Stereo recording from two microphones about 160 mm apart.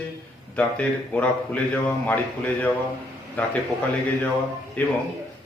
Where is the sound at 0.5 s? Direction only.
10° left (ahead or behind).